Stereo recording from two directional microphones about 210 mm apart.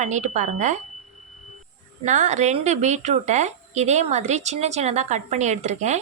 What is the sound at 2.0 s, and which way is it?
A woman's voice, 35° right (ahead or behind).